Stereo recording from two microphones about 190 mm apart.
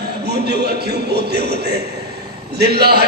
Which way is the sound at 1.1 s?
60° right (ahead or behind).